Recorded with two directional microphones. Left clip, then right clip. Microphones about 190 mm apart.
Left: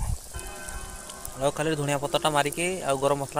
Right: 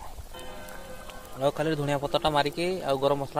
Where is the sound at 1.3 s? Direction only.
5° left (ahead or behind).